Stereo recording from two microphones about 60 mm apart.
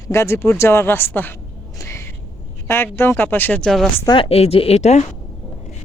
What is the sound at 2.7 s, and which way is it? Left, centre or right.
Speech, left.